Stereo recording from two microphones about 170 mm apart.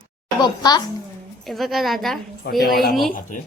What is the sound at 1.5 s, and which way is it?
Speech, centre (ahead or behind).